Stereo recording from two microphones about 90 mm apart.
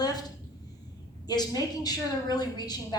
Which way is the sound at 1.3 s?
50° left (ahead or behind).